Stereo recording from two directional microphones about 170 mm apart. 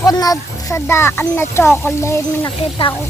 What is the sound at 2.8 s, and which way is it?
Speech, 35° left (ahead or behind).